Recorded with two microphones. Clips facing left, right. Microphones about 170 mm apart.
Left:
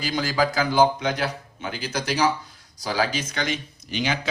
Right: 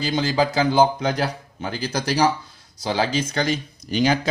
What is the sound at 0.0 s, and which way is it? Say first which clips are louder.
Speech: right 3 dB; 25° right (ahead or behind).